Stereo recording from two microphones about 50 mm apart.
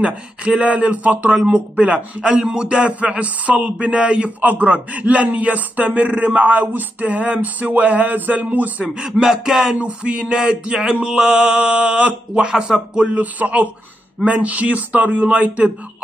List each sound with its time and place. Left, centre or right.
0.0 s male singing: right
1.3 s speech: centre
1.8 s male singing: right
3.8 s a man's voice: right
8.8 s speech: centre
9.8 s male singing: right
13.1 s a man's voice: right
14.2 s male singing: right